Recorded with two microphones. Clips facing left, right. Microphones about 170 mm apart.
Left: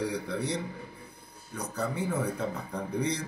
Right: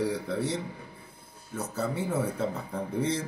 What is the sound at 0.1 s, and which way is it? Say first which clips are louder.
Speech: right 2 dB; centre (ahead or behind).